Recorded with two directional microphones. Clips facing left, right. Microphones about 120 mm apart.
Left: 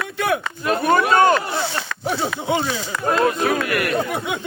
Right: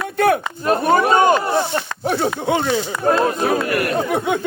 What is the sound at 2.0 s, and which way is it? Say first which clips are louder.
Speech: right 3 dB; 55° right (ahead or behind).